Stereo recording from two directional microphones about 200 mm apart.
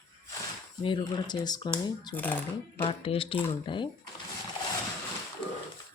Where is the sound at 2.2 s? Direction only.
10° left (ahead or behind).